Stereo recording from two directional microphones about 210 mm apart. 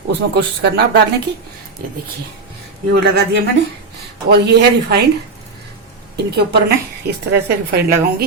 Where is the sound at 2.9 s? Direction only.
50° right (ahead or behind).